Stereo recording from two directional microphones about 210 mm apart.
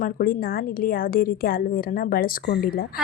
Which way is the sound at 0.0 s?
45° left (ahead or behind).